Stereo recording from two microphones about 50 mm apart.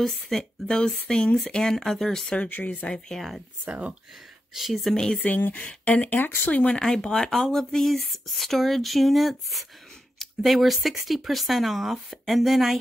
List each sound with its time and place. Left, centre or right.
0.0 s speech: centre
2.5 s speech: left
3.2 s speech: centre
3.6 s speech: right
4.6 s speech: centre
4.9 s speech: centre
5.2 s speech: left
6.0 s speech: left
6.7 s speech: centre